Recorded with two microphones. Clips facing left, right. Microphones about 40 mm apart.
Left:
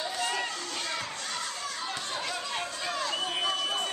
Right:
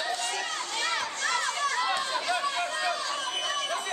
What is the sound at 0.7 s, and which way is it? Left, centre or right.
Children playing, right.